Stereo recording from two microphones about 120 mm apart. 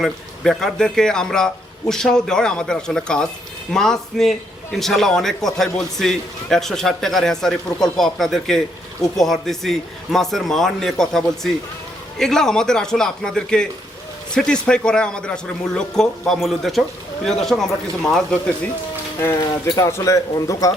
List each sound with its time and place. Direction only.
0.0 s a man's voice: 5° left (ahead or behind)
19.7 s speech: 25° left (ahead or behind)